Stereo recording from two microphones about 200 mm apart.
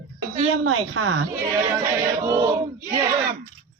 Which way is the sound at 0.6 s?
90° right.